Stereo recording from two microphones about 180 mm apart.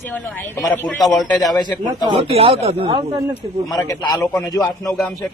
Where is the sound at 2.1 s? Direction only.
35° right (ahead or behind).